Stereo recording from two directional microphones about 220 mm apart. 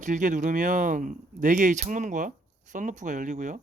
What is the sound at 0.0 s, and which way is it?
Speech, 35° right (ahead or behind).